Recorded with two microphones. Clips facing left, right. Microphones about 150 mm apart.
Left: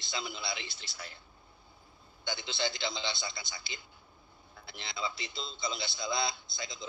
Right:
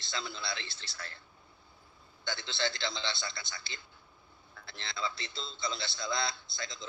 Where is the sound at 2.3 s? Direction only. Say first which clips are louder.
Even; 20° left (ahead or behind).